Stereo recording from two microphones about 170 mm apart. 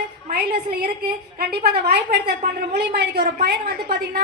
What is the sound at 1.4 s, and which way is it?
Speech, 70° right (ahead or behind).